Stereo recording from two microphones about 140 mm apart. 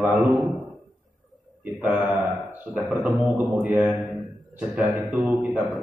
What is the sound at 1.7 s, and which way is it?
Speech, 5° right (ahead or behind).